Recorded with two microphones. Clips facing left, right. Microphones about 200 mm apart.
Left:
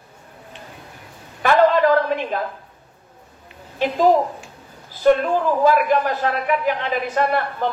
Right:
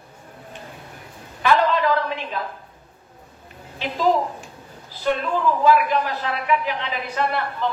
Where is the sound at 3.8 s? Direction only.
50° left (ahead or behind).